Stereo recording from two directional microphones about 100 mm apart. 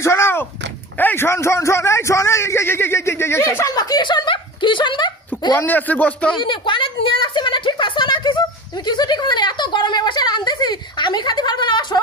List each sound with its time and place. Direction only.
0.0 s a sound: 25° left (ahead or behind)
0.9 s a man's voice: 20° left (ahead or behind); by 5.1 s 55° left (ahead or behind)
5.6 s speech: 15° left (ahead or behind)
6.3 s a woman's voice: 55° left (ahead or behind)